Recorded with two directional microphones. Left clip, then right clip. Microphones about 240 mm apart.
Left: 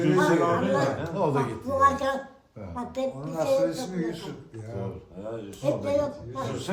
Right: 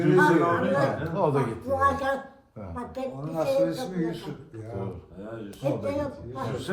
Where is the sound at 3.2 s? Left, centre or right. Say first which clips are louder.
Right 1 dB; centre.